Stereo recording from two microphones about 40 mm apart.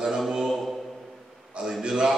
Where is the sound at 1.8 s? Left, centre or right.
Centre.